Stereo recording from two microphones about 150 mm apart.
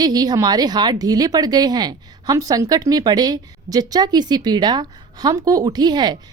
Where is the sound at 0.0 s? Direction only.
25° right (ahead or behind).